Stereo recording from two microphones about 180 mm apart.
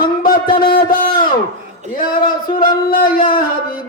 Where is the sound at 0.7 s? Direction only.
55° left (ahead or behind).